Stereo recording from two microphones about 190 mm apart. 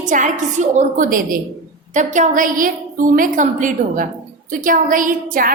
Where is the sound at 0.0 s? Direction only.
40° right (ahead or behind).